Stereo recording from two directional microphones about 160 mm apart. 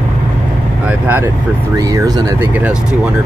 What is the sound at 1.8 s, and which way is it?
Speech, 20° right (ahead or behind).